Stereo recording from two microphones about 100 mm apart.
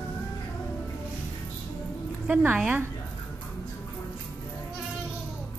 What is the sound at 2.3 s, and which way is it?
Speech, 10° right (ahead or behind).